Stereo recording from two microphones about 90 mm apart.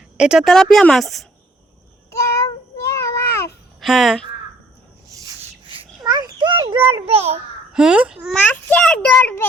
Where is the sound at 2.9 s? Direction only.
35° left (ahead or behind).